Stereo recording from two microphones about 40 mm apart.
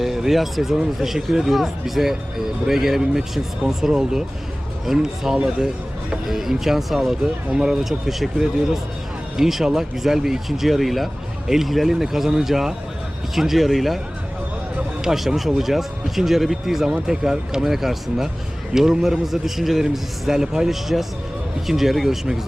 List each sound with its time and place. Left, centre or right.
0.0 s speech: centre
7.9 s speech: centre
9.4 s speech: centre
15.0 s speech: centre